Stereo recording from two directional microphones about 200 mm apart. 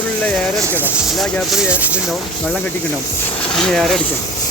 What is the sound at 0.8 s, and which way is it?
Speech, 5° right (ahead or behind).